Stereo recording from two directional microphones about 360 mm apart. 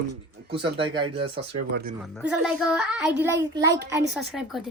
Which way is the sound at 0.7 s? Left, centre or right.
Centre.